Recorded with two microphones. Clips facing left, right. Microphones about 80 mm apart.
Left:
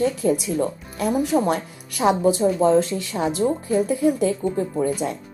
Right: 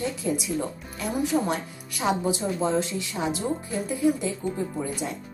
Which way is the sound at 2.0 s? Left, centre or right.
Left.